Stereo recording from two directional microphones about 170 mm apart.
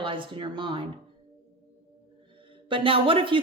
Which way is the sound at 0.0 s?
30° right (ahead or behind).